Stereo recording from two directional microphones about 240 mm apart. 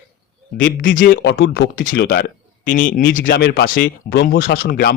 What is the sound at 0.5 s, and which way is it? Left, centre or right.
Speech, left.